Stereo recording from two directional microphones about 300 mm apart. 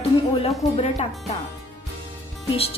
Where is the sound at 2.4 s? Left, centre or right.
Centre.